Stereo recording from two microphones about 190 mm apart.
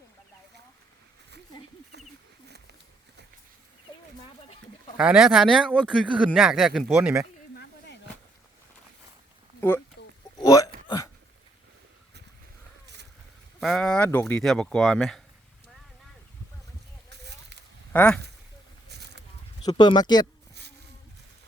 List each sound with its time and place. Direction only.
4.9 s speech: 5° right (ahead or behind)
9.6 s a sound: 10° left (ahead or behind)
10.3 s hiccup: 15° left (ahead or behind)
13.6 s speech: centre (ahead or behind)
17.9 s speech: 5° left (ahead or behind)
18.9 s a sound: 60° right (ahead or behind)
19.6 s speech: 25° left (ahead or behind)